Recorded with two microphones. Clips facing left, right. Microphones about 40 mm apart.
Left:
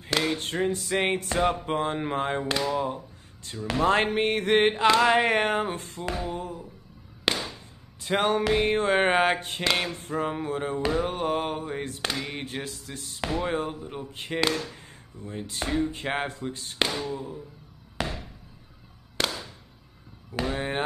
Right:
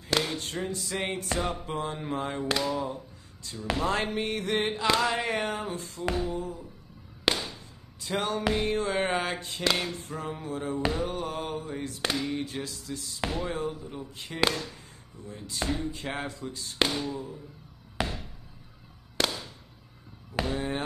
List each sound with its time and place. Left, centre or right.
0.4 s speech: left
2.4 s speech: centre
2.7 s speech: left
3.7 s speech: left
7.3 s music: centre
8.0 s speech: left
16.7 s speech: centre
17.1 s speech: centre
18.0 s a sound: centre
19.2 s a sound: centre
20.4 s speech: left